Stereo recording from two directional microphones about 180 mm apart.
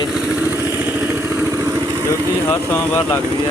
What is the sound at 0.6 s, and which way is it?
Vehicle, 10° right (ahead or behind).